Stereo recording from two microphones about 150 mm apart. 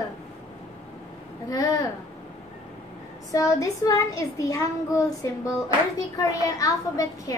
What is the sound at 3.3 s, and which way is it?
A child's voice, 20° left (ahead or behind).